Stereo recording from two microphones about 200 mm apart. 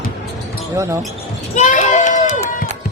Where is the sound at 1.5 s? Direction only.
35° left (ahead or behind).